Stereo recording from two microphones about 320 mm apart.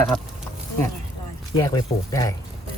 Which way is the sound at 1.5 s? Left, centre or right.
Centre.